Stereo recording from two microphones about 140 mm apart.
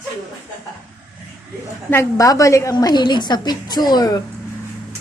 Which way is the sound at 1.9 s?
25° left (ahead or behind).